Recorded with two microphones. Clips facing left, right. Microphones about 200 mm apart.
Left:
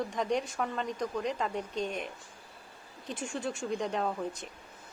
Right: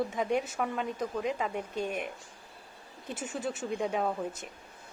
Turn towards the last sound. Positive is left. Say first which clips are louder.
# right 1 dB
turn(degrees=-5)  # may be behind; listen again after turning